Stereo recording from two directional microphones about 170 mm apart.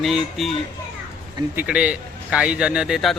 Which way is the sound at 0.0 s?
Centre (ahead or behind).